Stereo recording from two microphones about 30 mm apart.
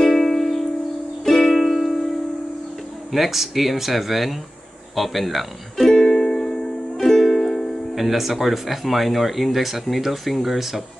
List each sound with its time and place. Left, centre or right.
0.0 s music: centre
3.1 s speech: centre
5.9 s music: centre
7.9 s speech: centre